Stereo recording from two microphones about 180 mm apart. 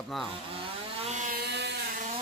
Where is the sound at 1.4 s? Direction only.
70° right (ahead or behind).